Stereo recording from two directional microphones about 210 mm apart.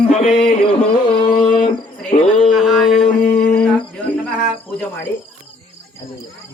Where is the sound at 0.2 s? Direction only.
30° left (ahead or behind).